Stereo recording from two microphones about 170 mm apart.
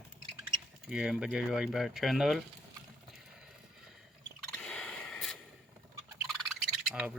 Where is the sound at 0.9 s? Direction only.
5° right (ahead or behind).